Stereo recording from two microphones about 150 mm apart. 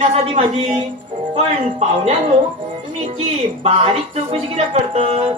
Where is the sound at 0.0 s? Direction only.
45° right (ahead or behind).